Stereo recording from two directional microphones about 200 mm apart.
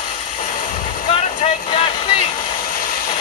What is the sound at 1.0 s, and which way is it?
Vehicle, 25° left (ahead or behind).